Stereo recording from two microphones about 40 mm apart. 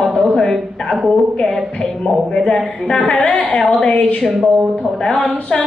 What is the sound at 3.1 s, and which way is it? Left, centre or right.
Speech, centre.